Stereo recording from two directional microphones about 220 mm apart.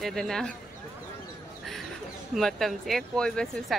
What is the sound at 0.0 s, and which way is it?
Speech, centre (ahead or behind).